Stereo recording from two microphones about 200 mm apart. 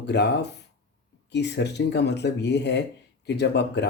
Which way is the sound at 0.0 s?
60° left (ahead or behind).